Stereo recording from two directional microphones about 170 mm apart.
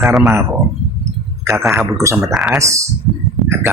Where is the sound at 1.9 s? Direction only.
15° right (ahead or behind).